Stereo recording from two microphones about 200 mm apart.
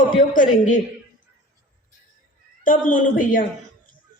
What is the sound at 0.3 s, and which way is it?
Speech, 40° left (ahead or behind).